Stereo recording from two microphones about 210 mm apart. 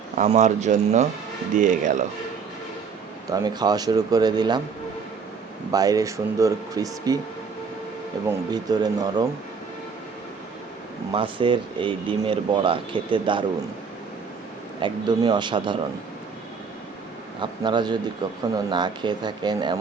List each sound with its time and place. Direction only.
0.2 s speech: 35° right (ahead or behind)
3.3 s speech: 20° right (ahead or behind)
5.7 s speech: 15° right (ahead or behind)
8.4 s speech: 20° right (ahead or behind)
11.1 s speech: 25° right (ahead or behind)
14.8 s speech: 20° right (ahead or behind)
17.4 s speech: 20° right (ahead or behind)